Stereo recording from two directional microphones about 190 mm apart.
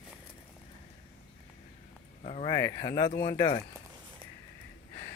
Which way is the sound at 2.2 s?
30° left (ahead or behind).